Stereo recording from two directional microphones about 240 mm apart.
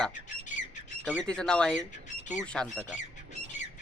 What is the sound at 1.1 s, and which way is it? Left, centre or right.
Speech, centre.